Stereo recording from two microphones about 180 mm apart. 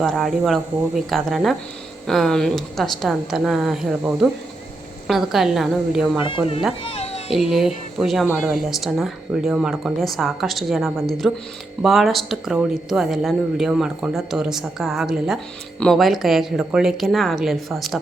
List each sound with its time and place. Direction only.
0.0 s speech: centre (ahead or behind)
6.2 s speech: 30° left (ahead or behind)
6.8 s music: 35° left (ahead or behind)
7.5 s speech: centre (ahead or behind)